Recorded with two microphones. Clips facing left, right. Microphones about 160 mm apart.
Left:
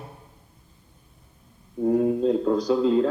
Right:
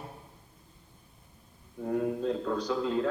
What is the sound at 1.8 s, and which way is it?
A man's voice, 25° left (ahead or behind).